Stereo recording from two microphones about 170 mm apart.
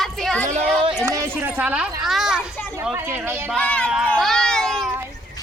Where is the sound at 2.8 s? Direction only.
10° right (ahead or behind).